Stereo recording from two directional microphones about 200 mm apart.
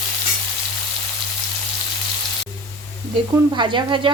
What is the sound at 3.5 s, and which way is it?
Speech, 20° right (ahead or behind).